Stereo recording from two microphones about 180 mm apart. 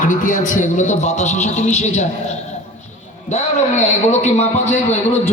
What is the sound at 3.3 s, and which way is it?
A man's voice, 40° left (ahead or behind).